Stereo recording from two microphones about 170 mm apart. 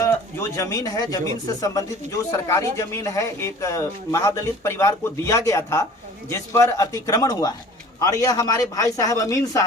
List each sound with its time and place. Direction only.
0.0 s a man's voice: 15° left (ahead or behind)